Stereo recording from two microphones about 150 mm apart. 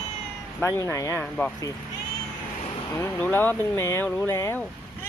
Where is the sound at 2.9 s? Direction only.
15° left (ahead or behind).